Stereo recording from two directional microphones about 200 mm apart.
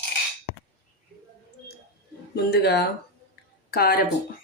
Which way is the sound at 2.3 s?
55° left (ahead or behind).